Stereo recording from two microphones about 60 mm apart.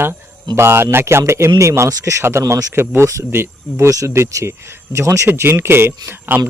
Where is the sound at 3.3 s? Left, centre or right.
Right.